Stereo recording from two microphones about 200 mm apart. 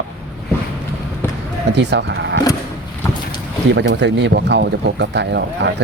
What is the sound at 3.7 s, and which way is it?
Speech, 60° right (ahead or behind).